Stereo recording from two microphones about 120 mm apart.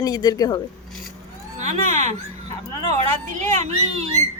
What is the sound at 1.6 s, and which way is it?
Speech, 75° right (ahead or behind).